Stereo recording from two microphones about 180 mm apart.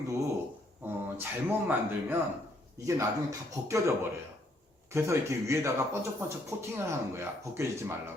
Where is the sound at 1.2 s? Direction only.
10° right (ahead or behind).